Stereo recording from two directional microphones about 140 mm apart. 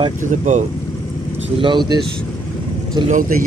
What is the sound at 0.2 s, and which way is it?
Speech, 65° right (ahead or behind).